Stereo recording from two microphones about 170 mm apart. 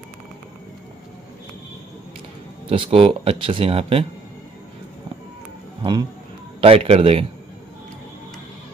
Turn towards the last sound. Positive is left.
turn(degrees=-35)  # may be behind; listen again after turning